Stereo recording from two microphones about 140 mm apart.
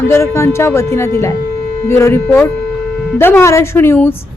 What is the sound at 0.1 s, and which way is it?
A woman's voice, 20° left (ahead or behind).